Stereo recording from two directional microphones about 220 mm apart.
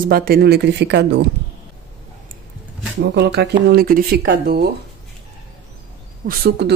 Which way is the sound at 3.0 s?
50° right (ahead or behind).